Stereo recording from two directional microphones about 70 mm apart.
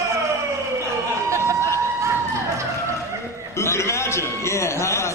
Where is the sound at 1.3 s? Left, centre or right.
Right.